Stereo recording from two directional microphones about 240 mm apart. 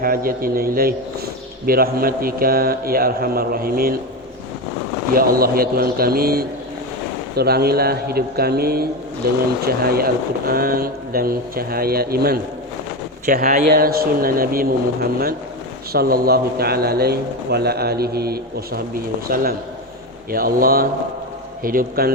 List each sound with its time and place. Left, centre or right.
0.0 s a man's voice: right
5.1 s a man's voice: right